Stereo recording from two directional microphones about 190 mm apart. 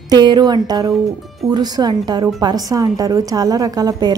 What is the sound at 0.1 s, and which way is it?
A woman's voice, 20° right (ahead or behind).